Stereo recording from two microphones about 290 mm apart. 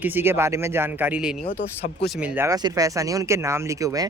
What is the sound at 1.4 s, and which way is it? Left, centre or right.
Speech, left.